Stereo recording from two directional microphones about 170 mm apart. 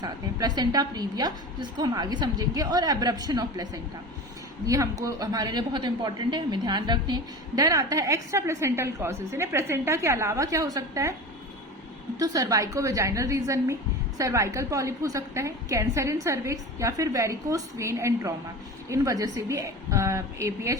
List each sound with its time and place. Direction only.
0.0 s a woman's voice: 25° right (ahead or behind)
12.2 s a woman's voice: 20° right (ahead or behind)